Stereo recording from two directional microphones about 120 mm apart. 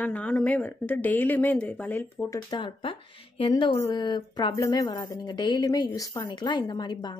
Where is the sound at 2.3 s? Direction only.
40° left (ahead or behind).